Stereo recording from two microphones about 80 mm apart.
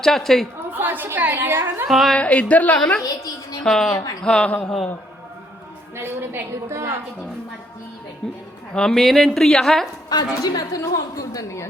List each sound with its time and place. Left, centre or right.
0.0 s a woman's voice: centre
0.7 s a woman's voice: right
1.9 s a woman's voice: centre
2.1 s a woman's voice: centre
3.0 s a woman's voice: left
3.6 s a woman's voice: centre
6.0 s a woman's voice: right
8.2 s a woman's voice: centre
10.4 s a woman's voice: left